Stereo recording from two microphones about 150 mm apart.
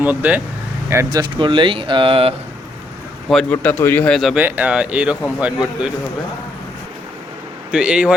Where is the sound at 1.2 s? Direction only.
35° right (ahead or behind).